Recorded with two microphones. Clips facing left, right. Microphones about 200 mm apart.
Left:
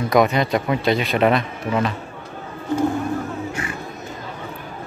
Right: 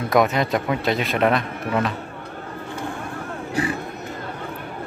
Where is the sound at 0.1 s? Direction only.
Centre (ahead or behind).